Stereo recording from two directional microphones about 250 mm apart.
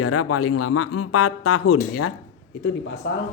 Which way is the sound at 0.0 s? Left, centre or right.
Left.